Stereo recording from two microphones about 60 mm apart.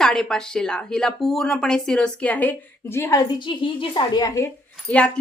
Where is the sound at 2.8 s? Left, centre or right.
Left.